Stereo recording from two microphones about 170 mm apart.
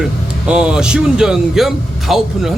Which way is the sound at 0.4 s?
5° right (ahead or behind).